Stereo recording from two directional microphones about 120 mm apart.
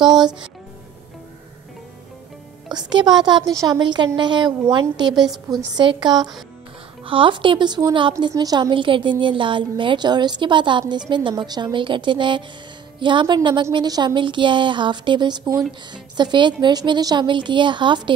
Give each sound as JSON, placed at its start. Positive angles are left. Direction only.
{"t": 2.7, "sound": "a woman's voice", "side_deg": -35}
{"t": 5.1, "sound": "a woman's voice", "side_deg": 0}
{"t": 5.8, "sound": "a woman's voice", "side_deg": -40}